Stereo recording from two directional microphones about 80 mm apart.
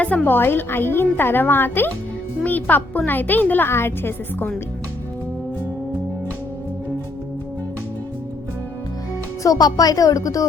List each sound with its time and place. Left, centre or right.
0.0 s a woman's voice: centre
9.4 s speech: left